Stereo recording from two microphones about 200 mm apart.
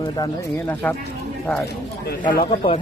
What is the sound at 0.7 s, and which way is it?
Speech, 10° left (ahead or behind).